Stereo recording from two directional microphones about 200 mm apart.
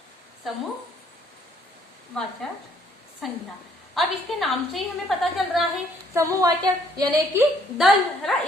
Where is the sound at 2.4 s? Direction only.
Centre (ahead or behind).